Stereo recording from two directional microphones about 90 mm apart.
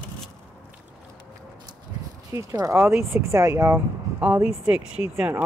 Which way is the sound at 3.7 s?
20° right (ahead or behind).